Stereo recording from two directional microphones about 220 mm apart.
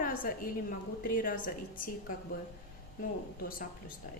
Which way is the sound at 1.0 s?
40° left (ahead or behind).